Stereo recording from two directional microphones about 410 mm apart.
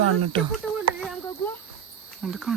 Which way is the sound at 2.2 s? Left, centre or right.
Centre.